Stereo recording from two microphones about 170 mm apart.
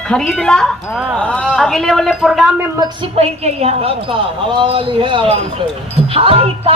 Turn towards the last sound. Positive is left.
turn(degrees=-35)  # may be behind; listen again after turning